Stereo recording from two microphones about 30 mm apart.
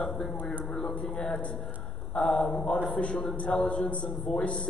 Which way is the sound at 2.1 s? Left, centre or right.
Left.